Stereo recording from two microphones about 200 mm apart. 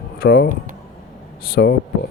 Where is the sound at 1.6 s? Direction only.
55° left (ahead or behind).